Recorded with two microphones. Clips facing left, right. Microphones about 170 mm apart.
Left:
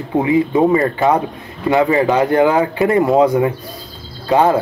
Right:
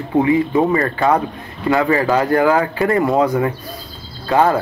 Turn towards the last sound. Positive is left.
turn(degrees=20)  # may be behind; listen again after turning